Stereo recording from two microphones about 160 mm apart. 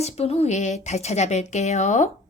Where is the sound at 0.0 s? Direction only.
40° left (ahead or behind).